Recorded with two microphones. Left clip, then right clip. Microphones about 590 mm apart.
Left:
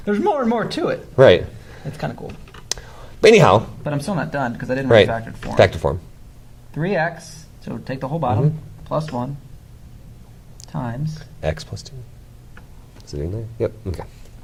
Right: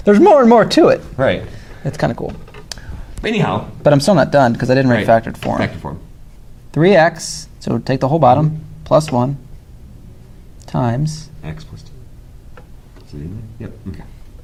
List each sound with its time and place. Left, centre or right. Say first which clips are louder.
0.0 s speech: right 11 dB; right
1.1 s speech: left 5 dB; left
1.9 s speech: right 10 dB; right
3.2 s speech: left 8 dB; left
3.8 s speech: right 13 dB; right
5.5 s speech: left 7 dB; left
6.7 s speech: right 11 dB; right
10.7 s speech: right 10 dB; right